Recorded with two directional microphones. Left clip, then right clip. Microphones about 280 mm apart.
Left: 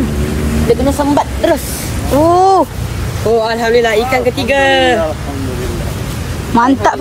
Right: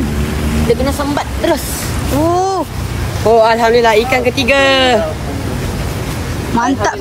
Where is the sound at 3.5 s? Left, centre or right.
Right.